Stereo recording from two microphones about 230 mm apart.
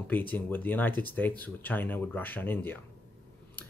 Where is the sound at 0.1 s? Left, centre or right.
Centre.